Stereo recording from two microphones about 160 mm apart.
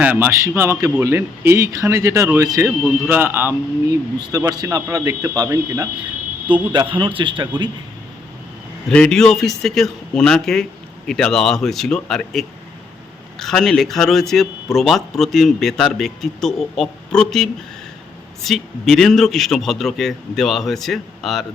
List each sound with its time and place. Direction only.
0.0 s a man's voice: 10° right (ahead or behind); by 7.7 s 30° right (ahead or behind)
8.9 s a man's voice: 5° left (ahead or behind)